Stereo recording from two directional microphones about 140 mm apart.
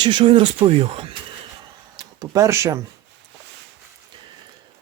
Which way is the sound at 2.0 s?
25° right (ahead or behind).